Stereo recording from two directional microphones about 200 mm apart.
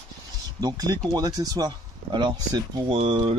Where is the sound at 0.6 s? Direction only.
20° right (ahead or behind).